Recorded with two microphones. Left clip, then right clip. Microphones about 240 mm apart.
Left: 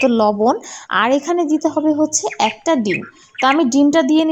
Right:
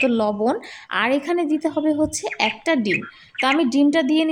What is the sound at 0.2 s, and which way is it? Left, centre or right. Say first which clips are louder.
A woman's voice: left 6 dB; centre.